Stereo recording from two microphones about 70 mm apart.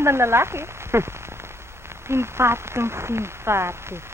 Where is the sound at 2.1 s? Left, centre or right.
Right.